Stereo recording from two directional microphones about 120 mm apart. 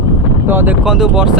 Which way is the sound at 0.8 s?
5° right (ahead or behind).